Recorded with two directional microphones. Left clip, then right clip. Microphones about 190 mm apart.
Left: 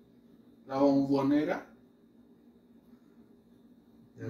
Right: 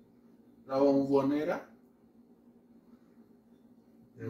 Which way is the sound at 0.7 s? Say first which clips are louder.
Even; 10° right (ahead or behind).